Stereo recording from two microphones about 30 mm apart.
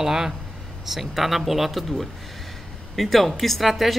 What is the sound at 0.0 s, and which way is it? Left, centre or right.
Speech, centre.